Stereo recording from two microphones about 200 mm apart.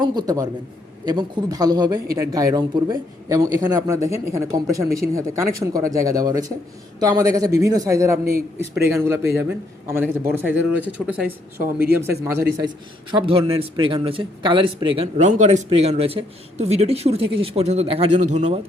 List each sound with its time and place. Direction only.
0.0 s a man's voice: 20° right (ahead or behind)
11.6 s speech: 50° right (ahead or behind)
11.9 s a man's voice: 15° right (ahead or behind); by 18.6 s 35° right (ahead or behind)